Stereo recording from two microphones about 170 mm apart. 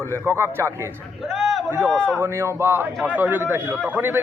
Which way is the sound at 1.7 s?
15° right (ahead or behind).